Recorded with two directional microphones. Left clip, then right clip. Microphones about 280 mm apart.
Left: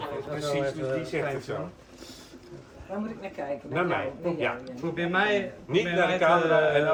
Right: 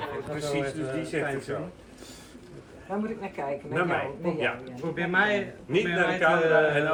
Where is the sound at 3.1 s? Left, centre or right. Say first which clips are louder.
Right 1 dB; centre.